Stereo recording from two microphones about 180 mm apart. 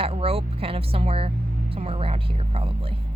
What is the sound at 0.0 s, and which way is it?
A woman's voice, 30° right (ahead or behind).